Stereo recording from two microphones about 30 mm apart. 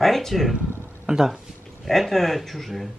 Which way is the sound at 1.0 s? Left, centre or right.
Centre.